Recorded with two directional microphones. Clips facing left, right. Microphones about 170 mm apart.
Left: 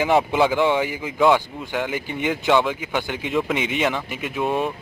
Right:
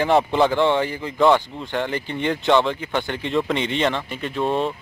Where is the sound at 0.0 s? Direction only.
5° left (ahead or behind).